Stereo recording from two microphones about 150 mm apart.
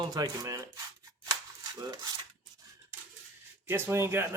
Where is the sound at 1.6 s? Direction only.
25° right (ahead or behind).